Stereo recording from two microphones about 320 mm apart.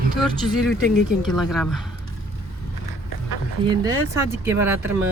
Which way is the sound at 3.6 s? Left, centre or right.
Centre.